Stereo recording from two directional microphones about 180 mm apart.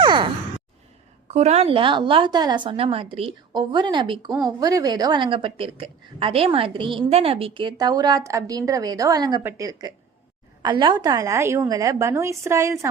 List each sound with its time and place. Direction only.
0.0 s sigh: 25° right (ahead or behind)
1.3 s a woman's voice: 35° right (ahead or behind)
4.3 s speech: centre (ahead or behind)
4.6 s a woman's voice: 20° right (ahead or behind)